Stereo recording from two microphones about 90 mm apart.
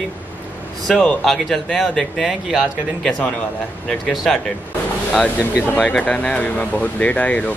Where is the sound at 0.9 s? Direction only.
5° left (ahead or behind).